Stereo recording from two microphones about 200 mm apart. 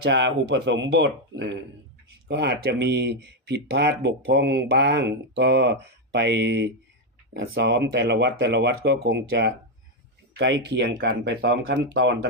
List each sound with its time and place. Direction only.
0.0 s speech: 60° right (ahead or behind)
7.3 s speech: 65° right (ahead or behind)